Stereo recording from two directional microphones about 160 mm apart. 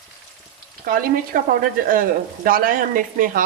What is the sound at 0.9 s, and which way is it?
Speech, 65° right (ahead or behind).